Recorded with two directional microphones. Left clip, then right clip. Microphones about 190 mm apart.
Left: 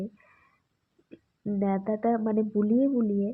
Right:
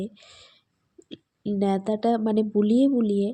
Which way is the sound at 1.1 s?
35° right (ahead or behind).